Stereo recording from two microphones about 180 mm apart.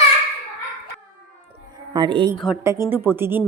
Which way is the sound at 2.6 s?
15° right (ahead or behind).